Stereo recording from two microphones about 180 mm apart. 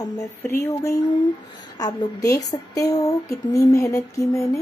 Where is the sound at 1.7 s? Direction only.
20° left (ahead or behind).